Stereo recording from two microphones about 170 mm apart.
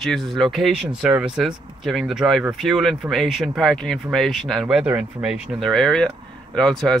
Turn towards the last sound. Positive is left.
turn(degrees=0)  # may be behind; listen again after turning